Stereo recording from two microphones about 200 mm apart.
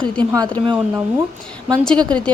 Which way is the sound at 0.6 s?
25° right (ahead or behind).